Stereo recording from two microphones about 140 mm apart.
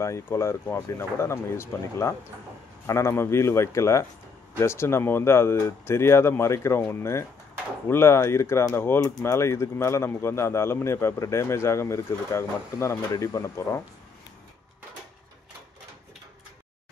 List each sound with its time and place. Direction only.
0.0 s speech: 20° left (ahead or behind)